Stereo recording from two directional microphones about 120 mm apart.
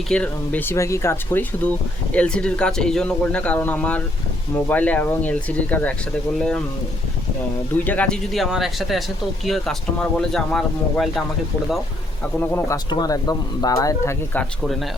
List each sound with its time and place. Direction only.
0.1 s a man's voice: 10° left (ahead or behind)
7.9 s speech: 10° left (ahead or behind)
12.4 s speech: 20° left (ahead or behind)
12.7 s speech: 30° left (ahead or behind)